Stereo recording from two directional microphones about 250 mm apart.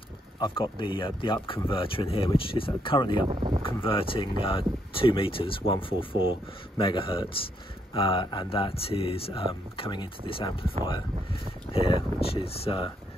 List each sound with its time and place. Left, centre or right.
0.4 s speech: centre
3.3 s speech: centre
3.6 s speech: left